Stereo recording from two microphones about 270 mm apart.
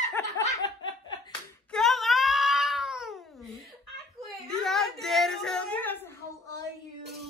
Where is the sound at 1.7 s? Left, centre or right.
Centre.